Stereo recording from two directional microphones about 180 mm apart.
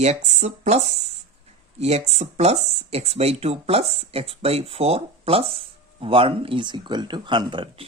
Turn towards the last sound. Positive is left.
turn(degrees=-25)  # may be behind; listen again after turning